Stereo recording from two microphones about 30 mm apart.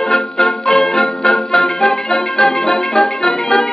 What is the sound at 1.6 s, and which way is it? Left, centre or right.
Music, centre.